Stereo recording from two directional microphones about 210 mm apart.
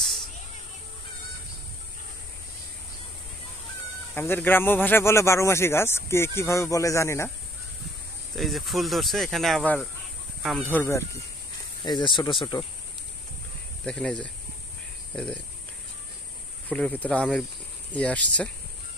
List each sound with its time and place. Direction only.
4.1 s speech: 10° left (ahead or behind)
8.4 s speech: centre (ahead or behind); by 12.6 s 25° left (ahead or behind)
13.8 s speech: 5° left (ahead or behind)
16.6 s speech: 5° left (ahead or behind)